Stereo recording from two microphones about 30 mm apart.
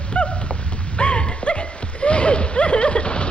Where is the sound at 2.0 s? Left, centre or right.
Left.